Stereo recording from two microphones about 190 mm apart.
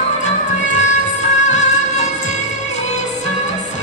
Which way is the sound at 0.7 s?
40° left (ahead or behind).